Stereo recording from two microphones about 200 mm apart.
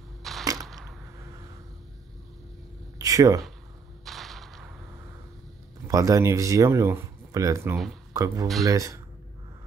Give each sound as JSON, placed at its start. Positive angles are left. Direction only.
{"t": 0.2, "sound": "arrow", "side_deg": 0}
{"t": 3.0, "sound": "speech", "side_deg": -15}
{"t": 4.0, "sound": "whip", "side_deg": 0}
{"t": 5.9, "sound": "speech", "side_deg": -15}